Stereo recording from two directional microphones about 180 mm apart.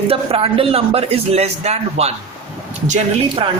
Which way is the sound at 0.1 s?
30° right (ahead or behind).